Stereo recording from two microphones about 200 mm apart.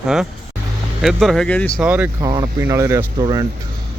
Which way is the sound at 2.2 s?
20° right (ahead or behind).